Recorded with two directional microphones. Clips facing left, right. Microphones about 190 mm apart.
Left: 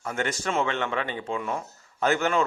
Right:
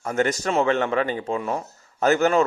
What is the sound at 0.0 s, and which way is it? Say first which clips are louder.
Speech: right 6 dB; 40° right (ahead or behind).